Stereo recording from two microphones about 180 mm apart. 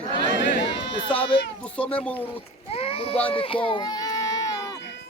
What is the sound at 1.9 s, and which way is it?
Speech, 10° left (ahead or behind).